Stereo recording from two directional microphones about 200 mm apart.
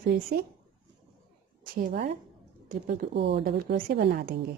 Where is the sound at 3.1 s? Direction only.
60° right (ahead or behind).